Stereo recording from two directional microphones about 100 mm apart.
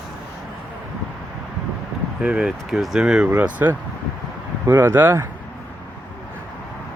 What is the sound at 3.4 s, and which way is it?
Speech, 20° right (ahead or behind).